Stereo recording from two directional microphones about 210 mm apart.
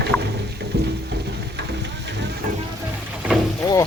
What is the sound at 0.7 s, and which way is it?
Music, 50° right (ahead or behind).